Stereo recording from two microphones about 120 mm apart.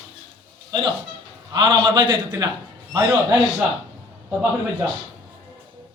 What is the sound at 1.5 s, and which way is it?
A man's voice, 35° right (ahead or behind).